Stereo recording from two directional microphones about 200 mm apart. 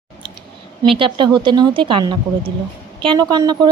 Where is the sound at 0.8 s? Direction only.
25° right (ahead or behind).